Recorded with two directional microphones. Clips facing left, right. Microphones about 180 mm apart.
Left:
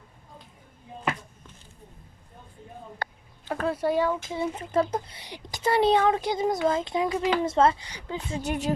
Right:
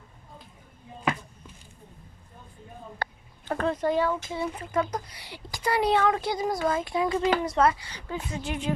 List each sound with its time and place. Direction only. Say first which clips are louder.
3.0 s a sound: right 1 dB; 65° right (ahead or behind)
3.5 s speech: even; 5° left (ahead or behind)
8.4 s speech: left 3 dB; 40° left (ahead or behind)